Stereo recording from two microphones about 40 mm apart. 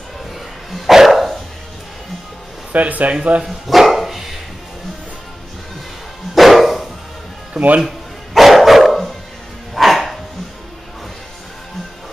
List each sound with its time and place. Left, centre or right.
0.7 s dog: centre
2.7 s speech: right
3.4 s dog: centre
6.3 s bow-wow: centre
7.5 s speech: right
8.4 s dog: centre